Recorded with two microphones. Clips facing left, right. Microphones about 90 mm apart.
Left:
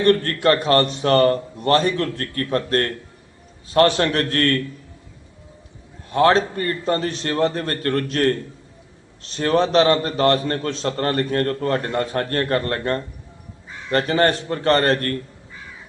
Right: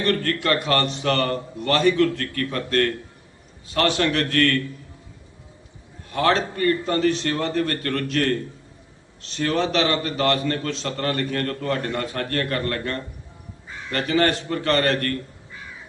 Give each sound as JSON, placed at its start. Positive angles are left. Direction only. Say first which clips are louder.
{"t": 0.0, "sound": "a man's voice", "louder": "left 6 dB", "side_deg": 35}
{"t": 6.1, "sound": "a man's voice", "louder": "left 5 dB", "side_deg": 35}